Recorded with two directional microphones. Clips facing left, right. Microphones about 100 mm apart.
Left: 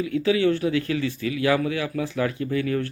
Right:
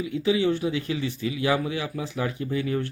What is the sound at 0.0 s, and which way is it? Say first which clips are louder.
Speech: left 2 dB; 20° right (ahead or behind).